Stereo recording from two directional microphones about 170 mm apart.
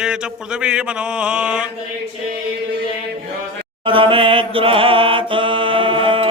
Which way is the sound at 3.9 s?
30° right (ahead or behind).